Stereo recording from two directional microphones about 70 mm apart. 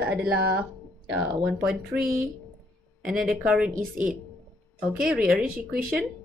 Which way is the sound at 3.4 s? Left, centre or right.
Centre.